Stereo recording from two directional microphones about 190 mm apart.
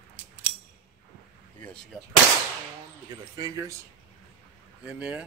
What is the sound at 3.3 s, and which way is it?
Speech, 20° right (ahead or behind).